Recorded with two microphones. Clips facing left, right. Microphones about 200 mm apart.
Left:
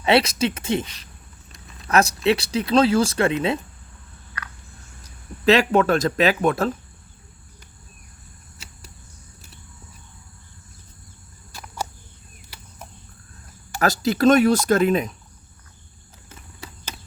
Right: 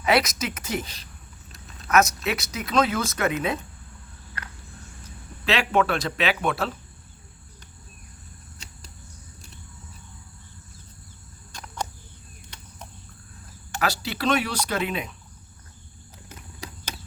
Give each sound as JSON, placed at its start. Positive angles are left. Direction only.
{"t": 0.0, "sound": "speech", "side_deg": 30}
{"t": 1.9, "sound": "speech", "side_deg": 30}
{"t": 5.0, "sound": "speech", "side_deg": 40}
{"t": 8.5, "sound": "a sound", "side_deg": 5}
{"t": 11.5, "sound": "a sound", "side_deg": 5}
{"t": 13.8, "sound": "speech", "side_deg": 45}